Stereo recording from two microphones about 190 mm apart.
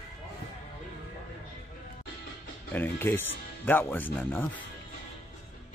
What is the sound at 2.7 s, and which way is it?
Speech, 10° left (ahead or behind).